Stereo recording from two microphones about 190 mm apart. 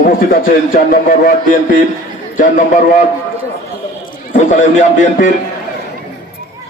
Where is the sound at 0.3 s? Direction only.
50° left (ahead or behind).